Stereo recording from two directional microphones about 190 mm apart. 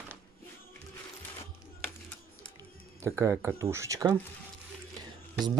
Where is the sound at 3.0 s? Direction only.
15° right (ahead or behind).